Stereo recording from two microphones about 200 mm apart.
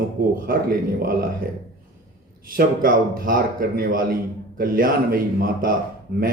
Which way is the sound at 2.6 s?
45° right (ahead or behind).